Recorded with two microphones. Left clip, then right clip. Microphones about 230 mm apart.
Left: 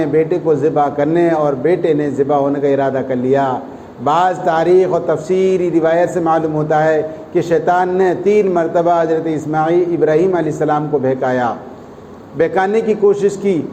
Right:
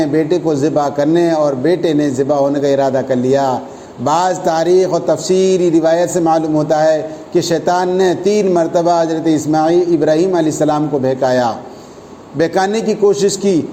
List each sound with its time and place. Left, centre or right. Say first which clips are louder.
0.0 s a man's voice: even; right